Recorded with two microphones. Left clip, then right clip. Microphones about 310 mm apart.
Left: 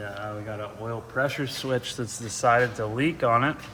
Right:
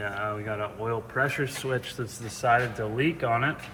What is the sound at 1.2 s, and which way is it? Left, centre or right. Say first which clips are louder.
Speech: even; centre.